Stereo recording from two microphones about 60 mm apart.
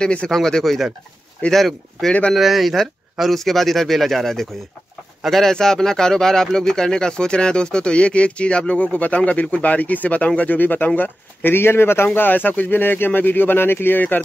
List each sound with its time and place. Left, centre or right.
0.0 s speech: centre
0.3 s speech: centre; by 14.2 s left